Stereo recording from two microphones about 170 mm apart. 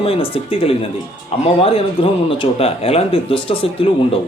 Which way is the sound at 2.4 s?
35° left (ahead or behind).